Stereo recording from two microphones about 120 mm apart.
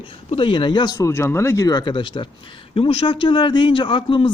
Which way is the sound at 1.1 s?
20° left (ahead or behind).